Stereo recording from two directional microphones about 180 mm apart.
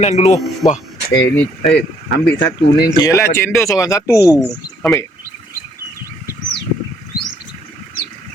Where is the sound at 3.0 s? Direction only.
15° left (ahead or behind).